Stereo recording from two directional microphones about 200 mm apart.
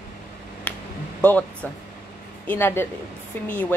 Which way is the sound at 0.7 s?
5° left (ahead or behind).